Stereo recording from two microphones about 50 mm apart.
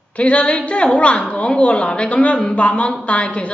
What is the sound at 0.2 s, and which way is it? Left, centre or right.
Speech, left.